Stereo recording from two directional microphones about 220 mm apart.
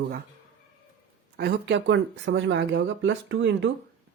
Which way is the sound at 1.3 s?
50° right (ahead or behind).